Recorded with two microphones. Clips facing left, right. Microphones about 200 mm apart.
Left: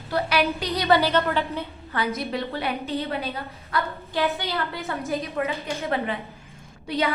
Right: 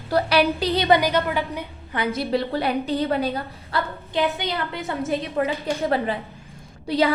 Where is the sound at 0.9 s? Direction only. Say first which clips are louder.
Left 1 dB; 15° right (ahead or behind); by 3.9 s 30° right (ahead or behind).